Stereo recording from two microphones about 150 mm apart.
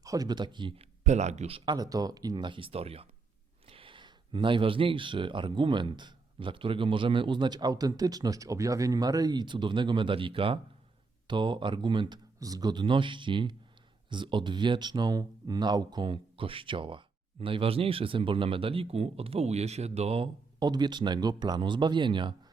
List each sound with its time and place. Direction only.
0.0 s speech: 25° right (ahead or behind)
1.0 s speech: 50° right (ahead or behind); by 22.4 s 30° right (ahead or behind)